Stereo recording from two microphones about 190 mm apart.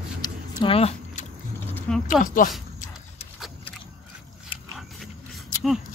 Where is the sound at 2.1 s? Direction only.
45° left (ahead or behind).